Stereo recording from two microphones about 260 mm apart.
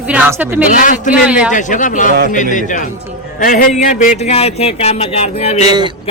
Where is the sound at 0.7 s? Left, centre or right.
Left.